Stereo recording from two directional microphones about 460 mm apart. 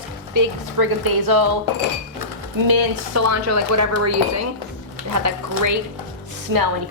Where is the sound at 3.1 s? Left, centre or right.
Right.